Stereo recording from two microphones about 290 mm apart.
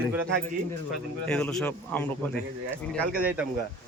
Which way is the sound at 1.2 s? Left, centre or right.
Centre.